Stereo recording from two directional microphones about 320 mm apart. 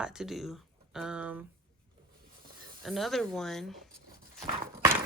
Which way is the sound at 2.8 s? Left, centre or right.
Centre.